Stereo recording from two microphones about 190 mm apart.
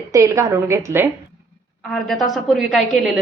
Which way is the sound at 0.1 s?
15° right (ahead or behind).